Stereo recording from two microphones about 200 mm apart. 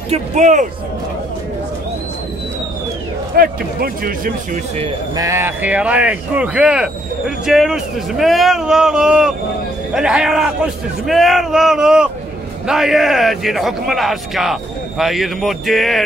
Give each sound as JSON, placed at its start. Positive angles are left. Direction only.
{"t": 0.1, "sound": "speech", "side_deg": -35}
{"t": 3.3, "sound": "speech", "side_deg": -45}
{"t": 5.1, "sound": "speech", "side_deg": -15}